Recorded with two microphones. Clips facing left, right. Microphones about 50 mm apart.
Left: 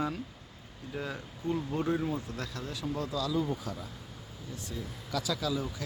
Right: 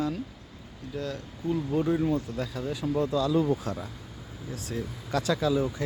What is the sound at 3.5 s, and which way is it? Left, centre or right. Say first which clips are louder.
Speech: right 7 dB; right.